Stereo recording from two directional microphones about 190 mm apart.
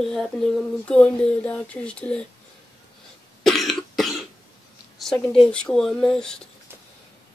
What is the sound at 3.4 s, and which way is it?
Cough, centre (ahead or behind).